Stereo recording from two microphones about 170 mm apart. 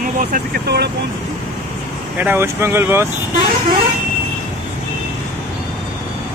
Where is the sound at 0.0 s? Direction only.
55° right (ahead or behind).